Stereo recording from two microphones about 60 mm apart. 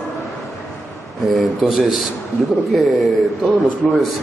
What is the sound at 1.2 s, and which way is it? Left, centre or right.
Speech, centre.